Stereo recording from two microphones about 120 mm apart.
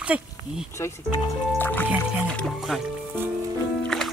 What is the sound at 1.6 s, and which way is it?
Speech, 15° left (ahead or behind).